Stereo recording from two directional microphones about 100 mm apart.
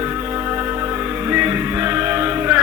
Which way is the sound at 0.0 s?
25° right (ahead or behind).